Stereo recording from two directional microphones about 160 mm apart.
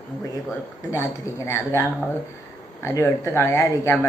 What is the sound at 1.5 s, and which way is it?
A man's voice, 15° left (ahead or behind).